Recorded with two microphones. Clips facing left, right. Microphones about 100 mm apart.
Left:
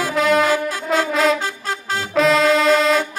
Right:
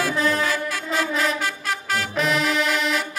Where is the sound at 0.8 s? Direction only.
90° left.